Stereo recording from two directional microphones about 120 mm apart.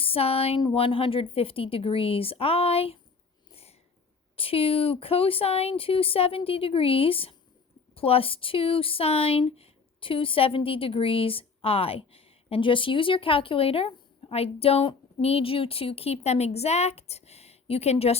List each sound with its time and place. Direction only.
0.0 s a sound: 55° left (ahead or behind)
0.6 s speech: 45° left (ahead or behind)
3.5 s sniff: 55° left (ahead or behind)
4.4 s speech: 50° left (ahead or behind)